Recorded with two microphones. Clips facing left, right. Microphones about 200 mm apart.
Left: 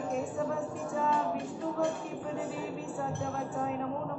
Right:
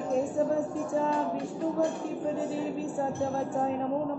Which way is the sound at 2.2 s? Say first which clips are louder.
Right 6 dB; 30° right (ahead or behind).